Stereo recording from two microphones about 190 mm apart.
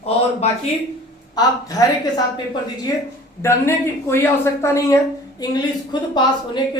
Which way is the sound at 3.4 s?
15° left (ahead or behind).